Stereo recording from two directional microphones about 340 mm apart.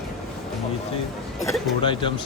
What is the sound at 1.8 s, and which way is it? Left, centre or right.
Speech, centre.